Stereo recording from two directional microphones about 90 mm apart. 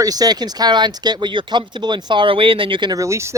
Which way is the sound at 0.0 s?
45° right (ahead or behind).